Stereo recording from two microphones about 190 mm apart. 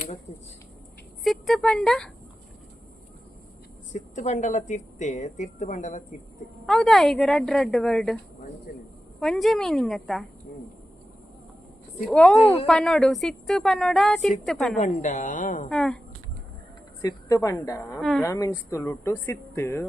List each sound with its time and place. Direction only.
1.2 s speech: centre (ahead or behind)
3.9 s a woman's voice: 40° left (ahead or behind)
6.7 s a woman's voice: centre (ahead or behind)
9.2 s a woman's voice: centre (ahead or behind)
11.9 s a woman's voice: 5° left (ahead or behind)
14.8 s a woman's voice: 40° left (ahead or behind)
15.7 s a woman's voice: 5° left (ahead or behind)
17.0 s speech: 20° left (ahead or behind)
18.0 s a woman's voice: centre (ahead or behind)
18.3 s speech: 15° left (ahead or behind)